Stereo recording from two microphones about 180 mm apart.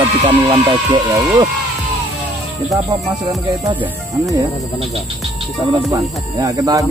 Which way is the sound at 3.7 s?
10° right (ahead or behind).